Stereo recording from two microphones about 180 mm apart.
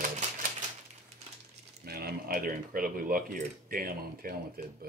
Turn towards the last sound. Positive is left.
turn(degrees=-55)  # may be behind; listen again after turning